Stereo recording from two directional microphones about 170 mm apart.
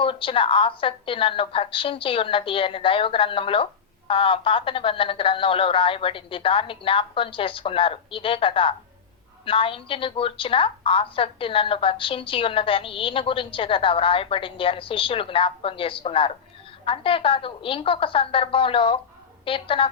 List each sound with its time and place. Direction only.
0.0 s a woman's voice: 30° left (ahead or behind)